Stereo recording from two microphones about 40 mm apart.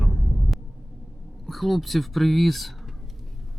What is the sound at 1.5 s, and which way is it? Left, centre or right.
Speech, centre.